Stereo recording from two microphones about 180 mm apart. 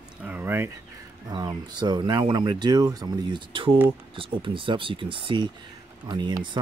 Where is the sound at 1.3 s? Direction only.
25° right (ahead or behind).